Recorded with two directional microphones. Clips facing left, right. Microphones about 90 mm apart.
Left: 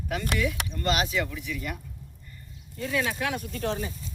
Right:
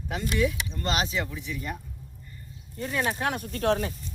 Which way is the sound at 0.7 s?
30° right (ahead or behind).